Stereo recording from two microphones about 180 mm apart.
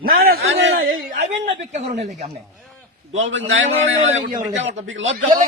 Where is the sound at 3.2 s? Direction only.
90° right.